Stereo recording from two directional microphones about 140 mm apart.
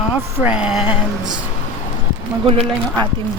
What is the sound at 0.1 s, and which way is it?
Speech, 10° right (ahead or behind).